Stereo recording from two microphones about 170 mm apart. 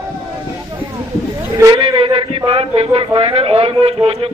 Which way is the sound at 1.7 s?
35° right (ahead or behind).